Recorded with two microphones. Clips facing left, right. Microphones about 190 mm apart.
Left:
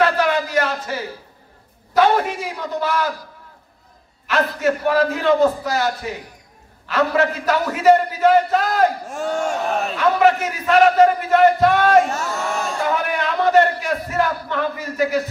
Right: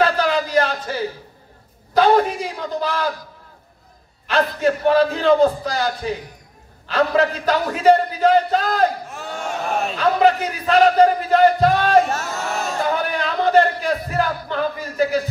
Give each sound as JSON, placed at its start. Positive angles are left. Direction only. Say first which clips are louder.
{"t": 0.0, "sound": "a sound", "louder": "even", "side_deg": -30}
{"t": 2.0, "sound": "speech", "louder": "right 1 dB", "side_deg": -30}
{"t": 4.3, "sound": "speech", "louder": "right 1 dB", "side_deg": -30}
{"t": 9.0, "sound": "speech", "louder": "left 7 dB", "side_deg": 45}
{"t": 9.9, "sound": "speech", "louder": "even", "side_deg": -35}
{"t": 12.9, "sound": "a sound", "louder": "left 1 dB", "side_deg": -35}